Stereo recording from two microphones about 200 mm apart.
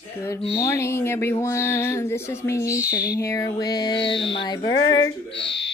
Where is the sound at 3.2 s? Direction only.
15° left (ahead or behind).